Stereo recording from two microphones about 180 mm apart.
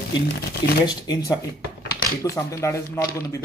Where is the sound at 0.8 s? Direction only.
25° left (ahead or behind).